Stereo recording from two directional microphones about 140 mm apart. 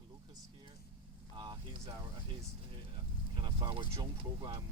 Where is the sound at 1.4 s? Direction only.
30° right (ahead or behind).